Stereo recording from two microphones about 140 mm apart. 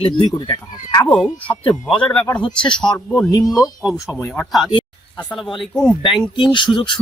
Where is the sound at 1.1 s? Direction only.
10° left (ahead or behind).